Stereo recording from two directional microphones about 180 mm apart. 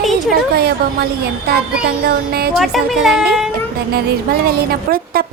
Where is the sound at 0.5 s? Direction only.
55° right (ahead or behind).